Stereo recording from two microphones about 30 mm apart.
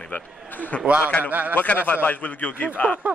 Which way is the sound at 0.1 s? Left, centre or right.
Left.